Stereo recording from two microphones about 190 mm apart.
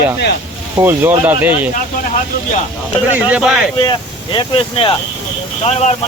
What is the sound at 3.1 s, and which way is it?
Speech, 5° right (ahead or behind).